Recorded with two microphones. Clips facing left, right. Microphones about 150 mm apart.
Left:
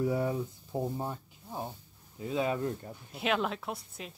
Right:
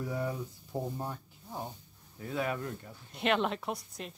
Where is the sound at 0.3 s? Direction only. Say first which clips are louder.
Left 3 dB; 15° left (ahead or behind).